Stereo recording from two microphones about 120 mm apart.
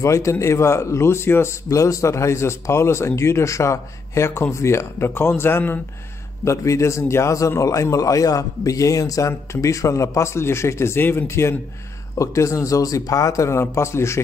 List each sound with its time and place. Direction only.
0.0 s a man's voice: 25° left (ahead or behind)